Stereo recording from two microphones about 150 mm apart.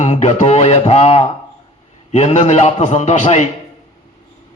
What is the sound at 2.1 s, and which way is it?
A man's voice, 50° left (ahead or behind).